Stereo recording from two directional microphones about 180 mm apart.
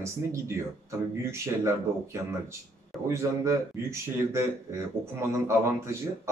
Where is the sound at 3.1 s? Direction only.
15° right (ahead or behind).